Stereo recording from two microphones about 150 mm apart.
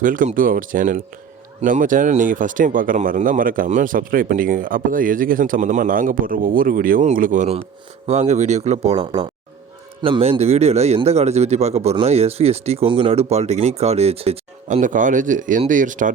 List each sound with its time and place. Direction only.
0.0 s speech: 60° right (ahead or behind)
7.0 s speech: 55° right (ahead or behind)
8.0 s speech: 50° right (ahead or behind)